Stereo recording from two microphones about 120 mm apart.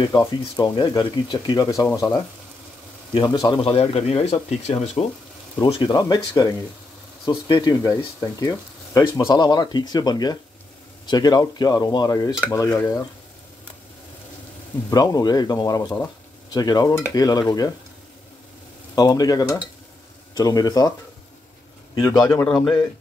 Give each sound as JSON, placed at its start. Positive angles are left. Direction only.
{"t": 0.2, "sound": "speech", "side_deg": 35}
{"t": 3.6, "sound": "speech", "side_deg": 55}
{"t": 5.7, "sound": "speech", "side_deg": 40}
{"t": 14.9, "sound": "speech", "side_deg": 30}
{"t": 18.9, "sound": "speech", "side_deg": 30}
{"t": 22.0, "sound": "speech", "side_deg": 30}